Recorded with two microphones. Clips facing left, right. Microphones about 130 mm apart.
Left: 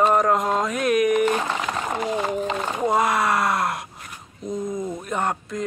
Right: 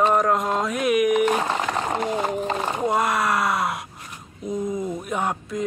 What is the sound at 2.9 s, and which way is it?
Speech, centre (ahead or behind).